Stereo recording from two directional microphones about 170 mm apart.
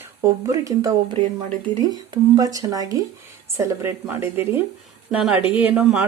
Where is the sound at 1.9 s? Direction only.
20° right (ahead or behind); by 6.1 s 5° right (ahead or behind).